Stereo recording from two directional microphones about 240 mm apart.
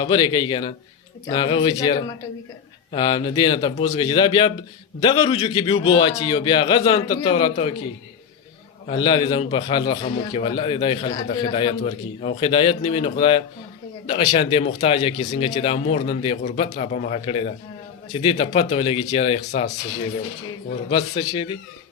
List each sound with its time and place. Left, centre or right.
0.0 s a man's voice: centre
8.9 s a man's voice: centre
20.9 s a man's voice: left